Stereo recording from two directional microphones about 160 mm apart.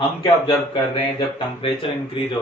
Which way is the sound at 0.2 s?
30° left (ahead or behind).